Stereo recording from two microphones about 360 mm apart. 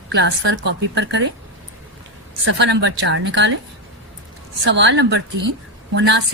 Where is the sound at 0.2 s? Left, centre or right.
Right.